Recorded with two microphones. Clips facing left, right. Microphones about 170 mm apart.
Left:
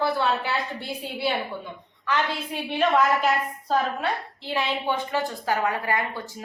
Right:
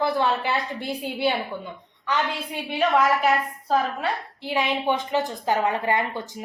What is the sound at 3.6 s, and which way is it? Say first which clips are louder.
A woman's voice: right 1 dB; 10° right (ahead or behind).